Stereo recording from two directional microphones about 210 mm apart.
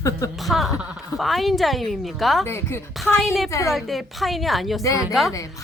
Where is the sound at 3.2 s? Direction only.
Centre (ahead or behind).